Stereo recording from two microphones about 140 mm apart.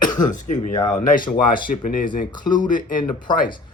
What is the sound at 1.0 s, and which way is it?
Speech, 75° left (ahead or behind).